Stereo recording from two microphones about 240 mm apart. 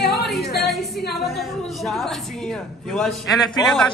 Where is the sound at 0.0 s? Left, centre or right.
Left.